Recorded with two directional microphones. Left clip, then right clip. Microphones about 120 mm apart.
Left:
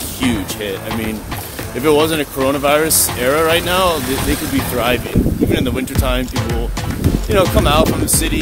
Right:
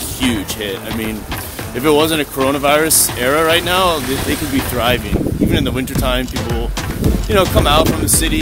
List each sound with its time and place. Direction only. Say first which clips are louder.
0.2 s music: right 1 dB; 25° right (ahead or behind)
1.8 s speech: even; 30° right (ahead or behind)
7.2 s speech: right 1 dB; 25° right (ahead or behind)